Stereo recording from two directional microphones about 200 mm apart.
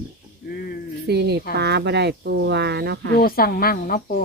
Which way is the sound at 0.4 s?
50° left (ahead or behind).